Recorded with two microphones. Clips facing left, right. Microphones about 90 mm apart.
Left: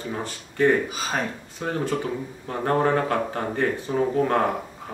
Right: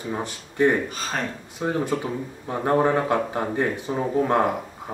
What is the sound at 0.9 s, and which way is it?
Speech, 5° left (ahead or behind).